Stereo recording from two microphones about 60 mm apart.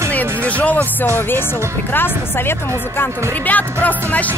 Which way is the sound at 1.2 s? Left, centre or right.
Left.